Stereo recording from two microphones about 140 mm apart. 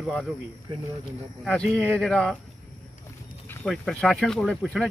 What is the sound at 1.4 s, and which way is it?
Speech, 5° left (ahead or behind).